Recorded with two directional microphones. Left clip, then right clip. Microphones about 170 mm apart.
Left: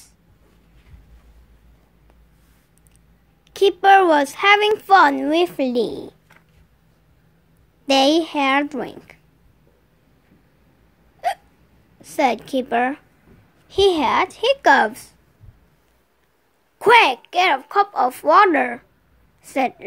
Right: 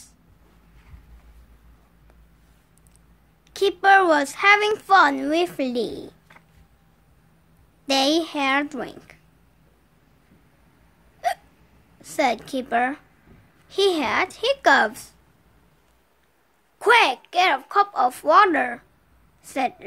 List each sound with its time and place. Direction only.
3.4 s a woman's voice: 10° left (ahead or behind)
7.8 s a woman's voice: 15° left (ahead or behind)
11.2 s hiccup: 15° left (ahead or behind)
12.0 s a woman's voice: 10° left (ahead or behind)
16.7 s a woman's voice: 15° left (ahead or behind)